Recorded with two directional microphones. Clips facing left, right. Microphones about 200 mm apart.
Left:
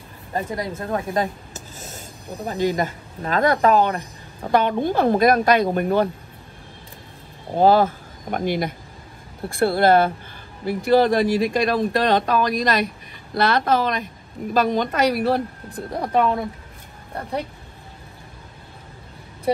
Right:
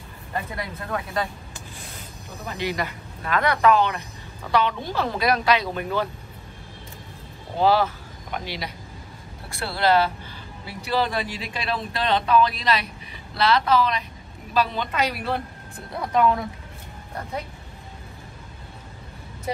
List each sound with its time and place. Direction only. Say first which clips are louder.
0.3 s a woman's voice: left 5 dB; 40° left (ahead or behind)
7.5 s a woman's voice: left 4 dB; 45° left (ahead or behind)